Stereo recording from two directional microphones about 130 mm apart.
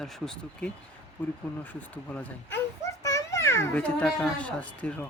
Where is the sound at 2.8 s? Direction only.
25° left (ahead or behind).